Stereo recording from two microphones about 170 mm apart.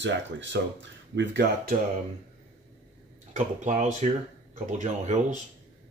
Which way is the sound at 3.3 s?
45° right (ahead or behind).